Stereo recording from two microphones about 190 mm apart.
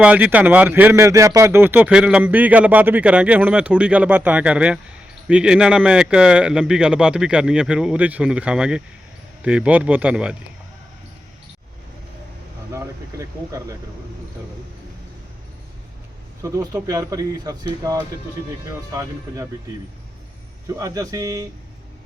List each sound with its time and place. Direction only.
0.0 s speech: 10° right (ahead or behind)
12.7 s speech: 15° right (ahead or behind)
16.4 s speech: 15° right (ahead or behind)
20.7 s speech: 15° right (ahead or behind)